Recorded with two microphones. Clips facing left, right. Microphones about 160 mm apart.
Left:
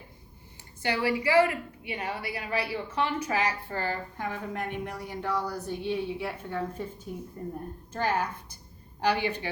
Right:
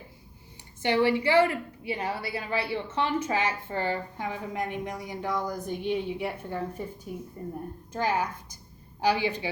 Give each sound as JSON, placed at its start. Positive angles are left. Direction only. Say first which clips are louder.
{"t": 0.8, "sound": "a woman's voice", "louder": "right 4 dB", "side_deg": -25}